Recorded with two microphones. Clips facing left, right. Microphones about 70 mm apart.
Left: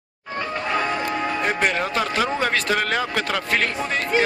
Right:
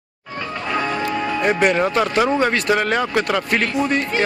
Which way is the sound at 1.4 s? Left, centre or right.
Centre.